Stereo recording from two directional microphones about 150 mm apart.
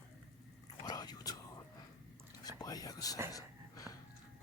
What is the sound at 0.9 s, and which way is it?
Whispering, 25° left (ahead or behind).